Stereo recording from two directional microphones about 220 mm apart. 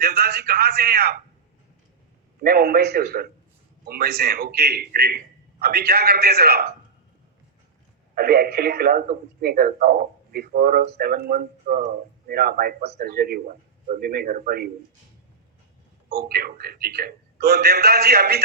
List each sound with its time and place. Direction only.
0.0 s speech: 45° right (ahead or behind)
2.4 s speech: 45° right (ahead or behind)
8.1 s a man's voice: 45° right (ahead or behind)
16.0 s speech: 45° right (ahead or behind)